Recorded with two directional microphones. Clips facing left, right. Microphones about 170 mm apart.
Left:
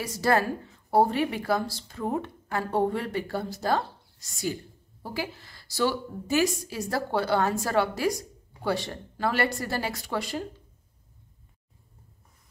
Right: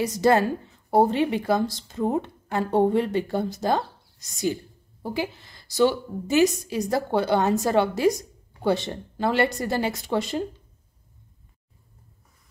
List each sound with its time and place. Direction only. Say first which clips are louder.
0.0 s a woman's voice: right 5 dB; 20° right (ahead or behind)